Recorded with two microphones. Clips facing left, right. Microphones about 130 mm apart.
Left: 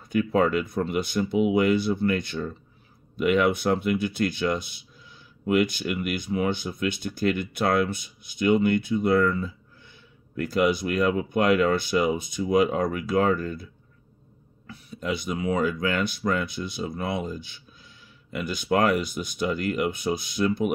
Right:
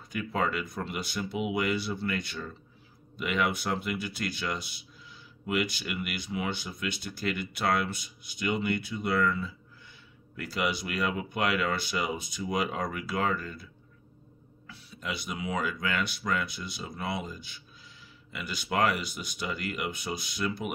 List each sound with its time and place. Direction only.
0.1 s speech: 45° left (ahead or behind)
14.7 s speech: 50° left (ahead or behind)